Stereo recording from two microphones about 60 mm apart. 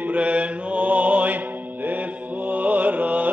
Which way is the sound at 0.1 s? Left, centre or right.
Right.